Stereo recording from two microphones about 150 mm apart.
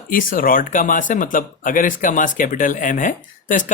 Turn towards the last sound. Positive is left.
turn(degrees=60)  # may be behind; listen again after turning